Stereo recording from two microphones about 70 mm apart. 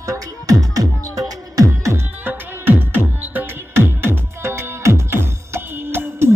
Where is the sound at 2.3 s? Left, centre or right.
Right.